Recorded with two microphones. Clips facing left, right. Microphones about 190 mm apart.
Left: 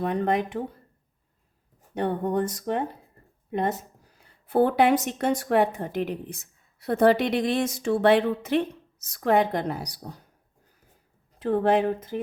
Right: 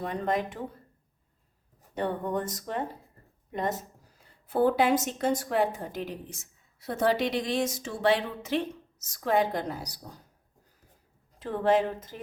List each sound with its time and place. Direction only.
0.0 s a woman's voice: 65° left (ahead or behind)
2.0 s a woman's voice: 60° left (ahead or behind)
11.3 s a woman's voice: 60° left (ahead or behind)